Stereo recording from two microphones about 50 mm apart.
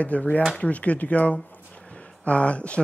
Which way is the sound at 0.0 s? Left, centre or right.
Left.